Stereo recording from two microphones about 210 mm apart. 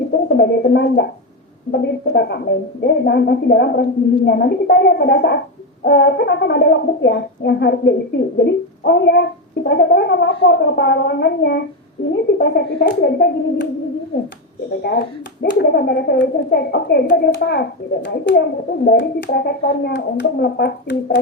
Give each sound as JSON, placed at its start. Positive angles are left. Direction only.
{"t": 0.3, "sound": "speech", "side_deg": 50}
{"t": 14.8, "sound": "speech", "side_deg": 45}